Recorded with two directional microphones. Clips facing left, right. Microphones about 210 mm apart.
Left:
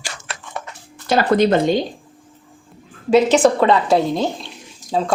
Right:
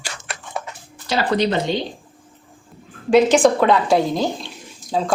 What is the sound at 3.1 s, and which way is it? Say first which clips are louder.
Speech: even; 5° left (ahead or behind).